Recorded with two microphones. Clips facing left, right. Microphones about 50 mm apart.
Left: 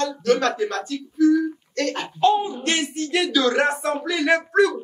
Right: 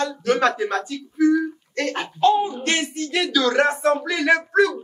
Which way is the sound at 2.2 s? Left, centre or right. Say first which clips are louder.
Right 1 dB; centre.